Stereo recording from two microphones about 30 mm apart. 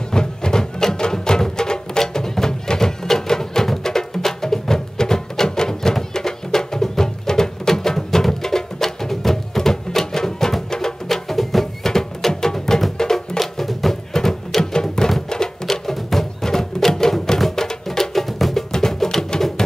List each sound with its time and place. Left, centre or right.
0.1 s music: left
13.4 s music: centre
14.1 s music: centre
15.7 s music: centre
19.3 s music: left